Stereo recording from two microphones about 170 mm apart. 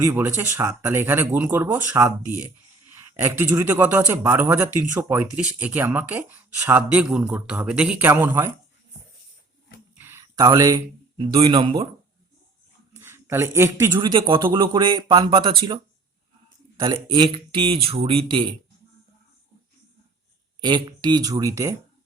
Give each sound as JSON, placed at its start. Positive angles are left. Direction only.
{"t": 0.0, "sound": "a man's voice", "side_deg": -15}
{"t": 10.0, "sound": "a sound", "side_deg": -15}
{"t": 11.2, "sound": "speech", "side_deg": -30}
{"t": 12.9, "sound": "speech", "side_deg": -15}
{"t": 16.8, "sound": "speech", "side_deg": -25}
{"t": 20.6, "sound": "speech", "side_deg": -25}